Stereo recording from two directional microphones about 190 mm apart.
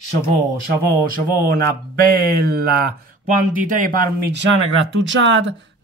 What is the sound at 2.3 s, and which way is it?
Speech, 55° right (ahead or behind).